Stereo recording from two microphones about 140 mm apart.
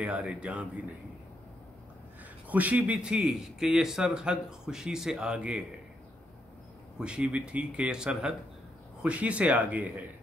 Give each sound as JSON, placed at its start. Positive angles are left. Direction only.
{"t": 0.0, "sound": "speech", "side_deg": -10}
{"t": 2.4, "sound": "a man's voice", "side_deg": -10}
{"t": 7.0, "sound": "speech", "side_deg": -5}